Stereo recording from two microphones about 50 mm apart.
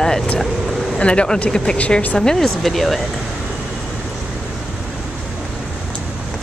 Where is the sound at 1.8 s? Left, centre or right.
Left.